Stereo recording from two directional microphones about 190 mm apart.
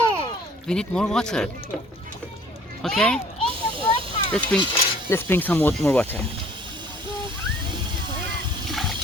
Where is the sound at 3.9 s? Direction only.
25° left (ahead or behind).